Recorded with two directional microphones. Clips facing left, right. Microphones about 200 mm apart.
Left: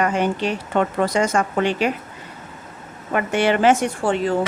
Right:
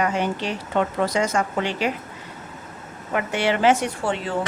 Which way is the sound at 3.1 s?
50° left (ahead or behind).